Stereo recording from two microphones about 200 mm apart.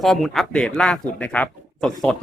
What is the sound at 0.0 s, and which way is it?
Speech, centre (ahead or behind).